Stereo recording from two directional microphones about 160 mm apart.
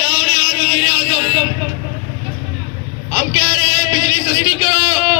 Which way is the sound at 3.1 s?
25° right (ahead or behind).